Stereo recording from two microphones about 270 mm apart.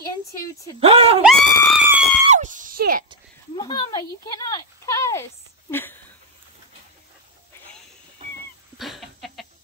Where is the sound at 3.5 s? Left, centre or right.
Centre.